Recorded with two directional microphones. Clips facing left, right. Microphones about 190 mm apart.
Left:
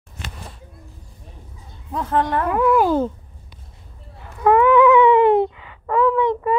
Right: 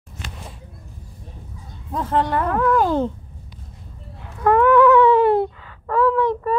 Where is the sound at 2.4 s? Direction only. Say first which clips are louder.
Left 2 dB; 10° left (ahead or behind).